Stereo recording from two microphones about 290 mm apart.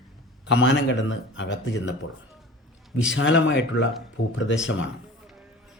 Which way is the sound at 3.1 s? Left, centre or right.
Left.